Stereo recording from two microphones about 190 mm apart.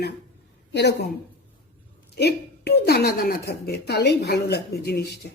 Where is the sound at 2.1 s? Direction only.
60° left (ahead or behind).